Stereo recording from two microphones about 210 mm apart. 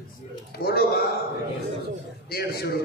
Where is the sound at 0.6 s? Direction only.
45° left (ahead or behind).